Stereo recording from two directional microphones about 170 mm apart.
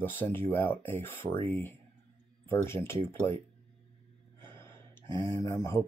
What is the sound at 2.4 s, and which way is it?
Speech, 15° left (ahead or behind).